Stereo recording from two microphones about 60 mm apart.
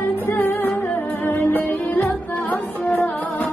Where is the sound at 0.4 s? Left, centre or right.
Left.